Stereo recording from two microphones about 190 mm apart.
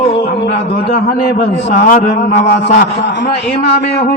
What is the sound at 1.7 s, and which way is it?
A man's voice, 40° left (ahead or behind).